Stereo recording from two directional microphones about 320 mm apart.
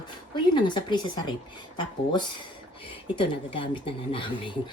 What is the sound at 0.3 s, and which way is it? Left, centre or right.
Speech, centre.